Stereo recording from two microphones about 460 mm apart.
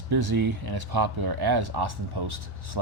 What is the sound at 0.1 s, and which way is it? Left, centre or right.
Speech, right.